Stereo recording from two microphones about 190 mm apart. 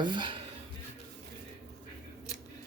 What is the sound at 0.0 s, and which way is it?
Speech, 25° right (ahead or behind).